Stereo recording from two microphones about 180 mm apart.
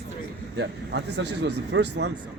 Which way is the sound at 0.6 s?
75° right (ahead or behind).